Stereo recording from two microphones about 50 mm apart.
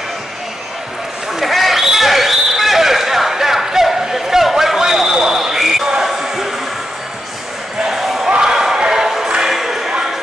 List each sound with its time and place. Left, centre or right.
1.4 s basketball bounce: centre
7.8 s basketball bounce: centre
8.3 s a sound: centre